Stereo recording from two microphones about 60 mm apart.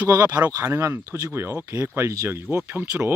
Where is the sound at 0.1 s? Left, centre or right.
Right.